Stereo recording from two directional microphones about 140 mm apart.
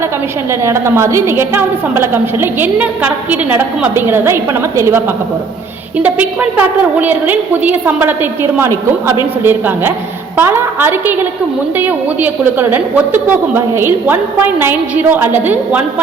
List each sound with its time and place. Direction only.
0.6 s a woman's voice: 20° right (ahead or behind)